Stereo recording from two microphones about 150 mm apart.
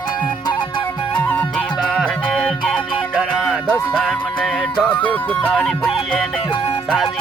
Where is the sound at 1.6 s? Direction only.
5° left (ahead or behind).